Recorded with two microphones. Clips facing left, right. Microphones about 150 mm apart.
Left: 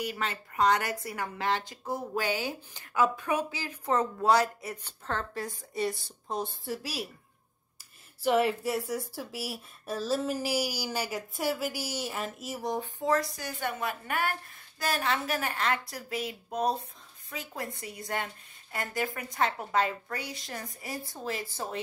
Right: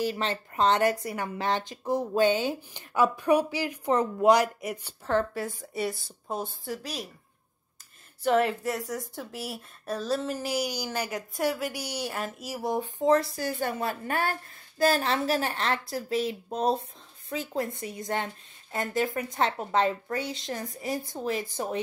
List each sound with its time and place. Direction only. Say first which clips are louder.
0.0 s speech: right 5 dB; 30° right (ahead or behind); by 7.1 s 5° left (ahead or behind)
8.2 s a woman's voice: right 1 dB; 5° left (ahead or behind)
12.7 s a woman's voice: right 6 dB; 20° right (ahead or behind)